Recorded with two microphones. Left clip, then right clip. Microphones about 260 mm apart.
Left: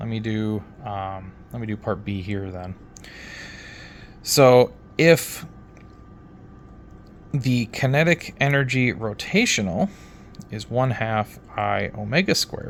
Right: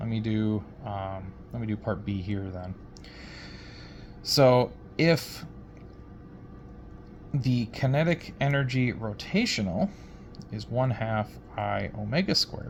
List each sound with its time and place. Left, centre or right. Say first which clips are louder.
0.0 s speech: left 3 dB; left
3.2 s a sound: left 8 dB; left
7.3 s speech: left 6 dB; left